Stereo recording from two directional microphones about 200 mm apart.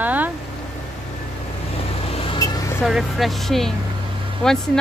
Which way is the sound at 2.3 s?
20° left (ahead or behind).